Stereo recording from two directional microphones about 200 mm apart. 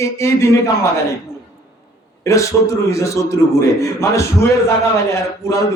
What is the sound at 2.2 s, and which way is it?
A man's voice, 15° left (ahead or behind).